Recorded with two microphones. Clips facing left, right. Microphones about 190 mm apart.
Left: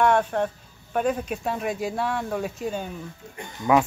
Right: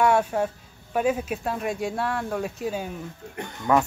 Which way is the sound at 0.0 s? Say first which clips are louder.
Even; 5° right (ahead or behind).